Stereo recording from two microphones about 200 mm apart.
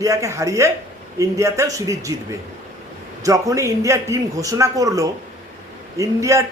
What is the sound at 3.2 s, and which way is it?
A man's voice, 15° right (ahead or behind).